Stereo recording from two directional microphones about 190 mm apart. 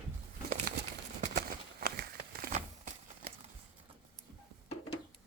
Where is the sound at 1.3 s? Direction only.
55° right (ahead or behind).